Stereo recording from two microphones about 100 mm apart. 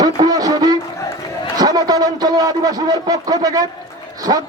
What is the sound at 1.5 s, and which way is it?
A man's voice, 40° right (ahead or behind).